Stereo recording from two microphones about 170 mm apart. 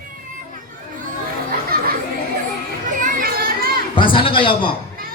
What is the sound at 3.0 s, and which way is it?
Children playing, 55° right (ahead or behind).